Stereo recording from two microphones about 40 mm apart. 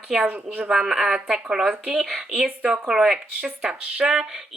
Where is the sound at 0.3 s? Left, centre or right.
Right.